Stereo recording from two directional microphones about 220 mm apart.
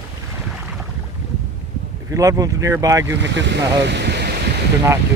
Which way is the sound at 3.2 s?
55° right (ahead or behind).